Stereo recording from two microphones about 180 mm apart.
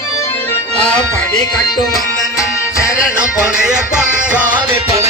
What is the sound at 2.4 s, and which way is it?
Music, 15° left (ahead or behind).